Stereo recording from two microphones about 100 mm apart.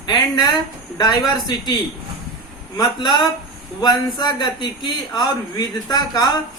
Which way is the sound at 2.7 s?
45° left (ahead or behind).